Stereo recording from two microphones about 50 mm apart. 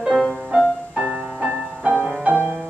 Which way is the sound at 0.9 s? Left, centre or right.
Right.